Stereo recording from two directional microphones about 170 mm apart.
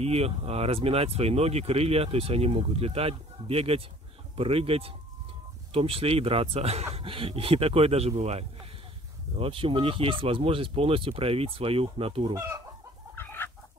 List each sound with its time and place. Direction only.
0.0 s speech: 35° right (ahead or behind)
12.4 s chicken: 15° right (ahead or behind)
13.1 s chicken: 10° left (ahead or behind)